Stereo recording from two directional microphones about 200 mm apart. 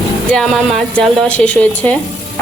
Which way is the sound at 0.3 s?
Centre (ahead or behind).